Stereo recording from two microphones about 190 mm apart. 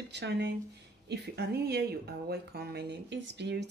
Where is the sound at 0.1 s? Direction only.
65° right (ahead or behind).